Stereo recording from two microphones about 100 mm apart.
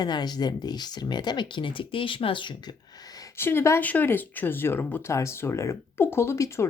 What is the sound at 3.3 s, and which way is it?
Speech, 25° left (ahead or behind).